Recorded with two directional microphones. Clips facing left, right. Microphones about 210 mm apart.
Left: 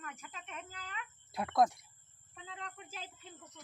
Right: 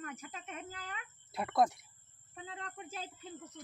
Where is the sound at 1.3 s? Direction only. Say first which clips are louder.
Left 1 dB; centre (ahead or behind).